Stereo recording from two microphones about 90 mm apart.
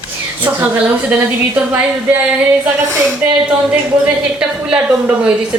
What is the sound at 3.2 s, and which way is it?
A woman's voice, 20° right (ahead or behind).